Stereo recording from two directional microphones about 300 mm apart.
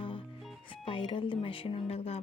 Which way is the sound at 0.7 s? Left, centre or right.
Centre.